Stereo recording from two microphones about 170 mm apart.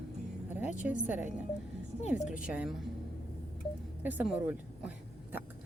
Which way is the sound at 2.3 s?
5° right (ahead or behind).